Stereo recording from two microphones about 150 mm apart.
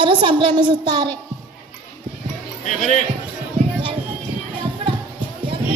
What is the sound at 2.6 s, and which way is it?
Speech, 50° left (ahead or behind).